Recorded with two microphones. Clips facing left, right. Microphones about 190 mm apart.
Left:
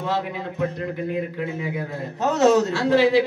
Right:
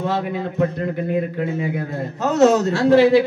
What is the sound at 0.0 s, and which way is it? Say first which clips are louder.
Speech: right 4 dB; 50° right (ahead or behind).